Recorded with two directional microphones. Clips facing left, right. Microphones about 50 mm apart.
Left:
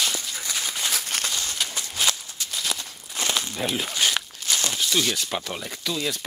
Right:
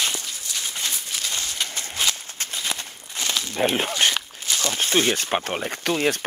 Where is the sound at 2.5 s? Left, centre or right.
Right.